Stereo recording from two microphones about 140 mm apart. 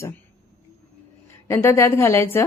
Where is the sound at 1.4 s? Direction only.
20° left (ahead or behind).